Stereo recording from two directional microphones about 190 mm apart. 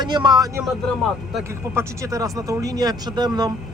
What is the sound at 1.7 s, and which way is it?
Speech, 15° right (ahead or behind).